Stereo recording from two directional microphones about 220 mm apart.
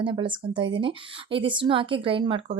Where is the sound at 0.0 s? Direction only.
20° right (ahead or behind).